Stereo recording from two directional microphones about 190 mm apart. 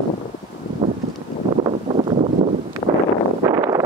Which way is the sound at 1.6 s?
30° right (ahead or behind).